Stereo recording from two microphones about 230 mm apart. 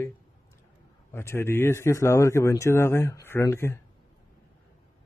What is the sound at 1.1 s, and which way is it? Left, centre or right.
A man's voice, centre.